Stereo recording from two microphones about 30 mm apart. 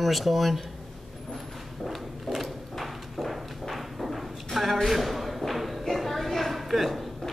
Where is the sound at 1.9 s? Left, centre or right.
Centre.